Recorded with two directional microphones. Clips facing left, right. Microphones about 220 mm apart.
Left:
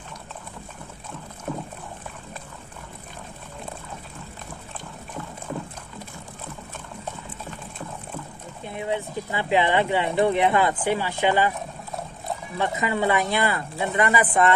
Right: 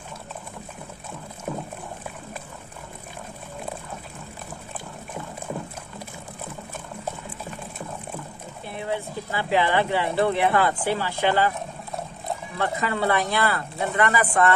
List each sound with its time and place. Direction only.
1.5 s dog: 10° right (ahead or behind)
8.6 s speech: 20° left (ahead or behind)
12.5 s speech: 15° left (ahead or behind)